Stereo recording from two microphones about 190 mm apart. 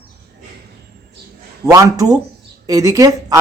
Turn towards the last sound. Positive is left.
turn(degrees=-20)  # may be behind; listen again after turning